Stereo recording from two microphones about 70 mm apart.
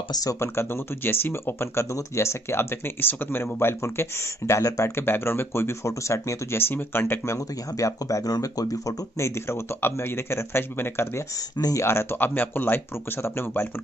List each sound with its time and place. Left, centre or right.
0.1 s speech: left
0.4 s speech: left
5.0 s speech: left
7.3 s speech: left
9.2 s speech: left
11.5 s speech: left
11.8 s speech: left